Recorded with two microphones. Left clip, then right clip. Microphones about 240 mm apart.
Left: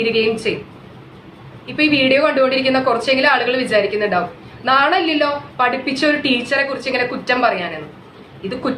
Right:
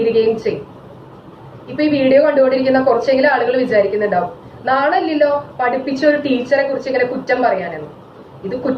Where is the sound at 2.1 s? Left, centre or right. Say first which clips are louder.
Right 3 dB; centre.